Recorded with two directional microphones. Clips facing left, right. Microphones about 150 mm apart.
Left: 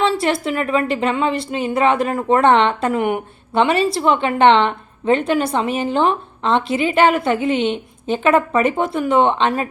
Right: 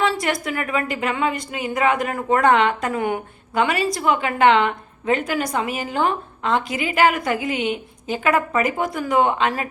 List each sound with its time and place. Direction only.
0.0 s a woman's voice: 25° left (ahead or behind)